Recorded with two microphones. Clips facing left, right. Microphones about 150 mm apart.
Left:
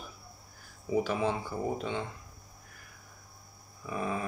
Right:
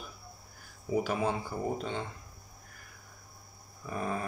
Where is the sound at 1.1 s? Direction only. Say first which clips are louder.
Left 1 dB; 45° right (ahead or behind).